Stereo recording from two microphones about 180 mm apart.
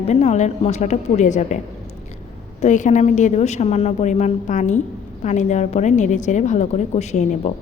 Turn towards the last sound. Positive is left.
turn(degrees=40)  # may be behind; listen again after turning